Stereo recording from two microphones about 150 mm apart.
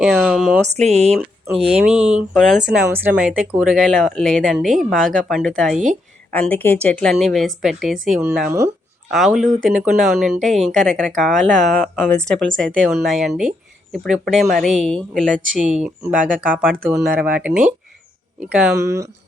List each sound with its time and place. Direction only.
0.0 s speech: 5° right (ahead or behind)
0.8 s speech: 45° right (ahead or behind)
1.8 s speech: 5° right (ahead or behind)
2.6 s speech: 10° right (ahead or behind)
8.4 s speech: 20° right (ahead or behind)
9.1 s speech: centre (ahead or behind)
18.8 s speech: 20° right (ahead or behind)